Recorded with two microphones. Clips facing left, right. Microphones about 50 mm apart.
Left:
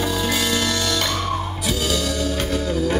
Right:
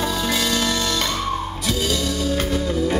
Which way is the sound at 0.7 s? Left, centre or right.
Centre.